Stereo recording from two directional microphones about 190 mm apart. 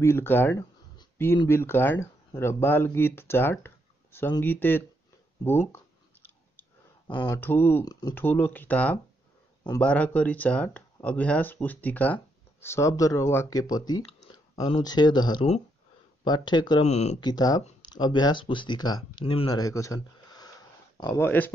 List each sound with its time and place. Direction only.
0.0 s speech: 10° left (ahead or behind)
7.1 s speech: 25° left (ahead or behind)
7.3 s speech: 10° left (ahead or behind)
16.8 s speech: 35° left (ahead or behind)
17.2 s speech: 20° left (ahead or behind)